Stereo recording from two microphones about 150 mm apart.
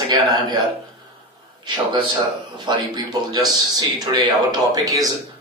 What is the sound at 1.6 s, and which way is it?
A man's voice, 30° right (ahead or behind).